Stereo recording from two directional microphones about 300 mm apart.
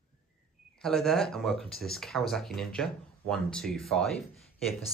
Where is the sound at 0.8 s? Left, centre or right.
Centre.